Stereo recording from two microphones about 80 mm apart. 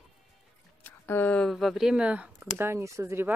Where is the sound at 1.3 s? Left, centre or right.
Centre.